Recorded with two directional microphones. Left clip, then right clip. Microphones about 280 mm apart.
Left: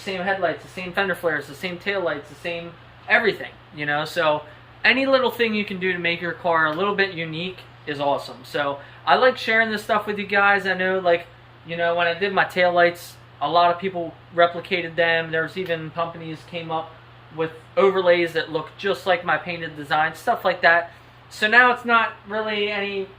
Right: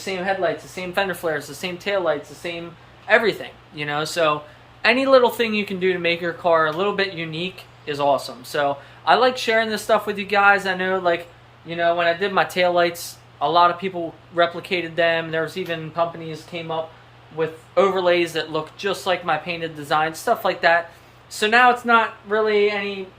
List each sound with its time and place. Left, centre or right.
0.9 s speech: centre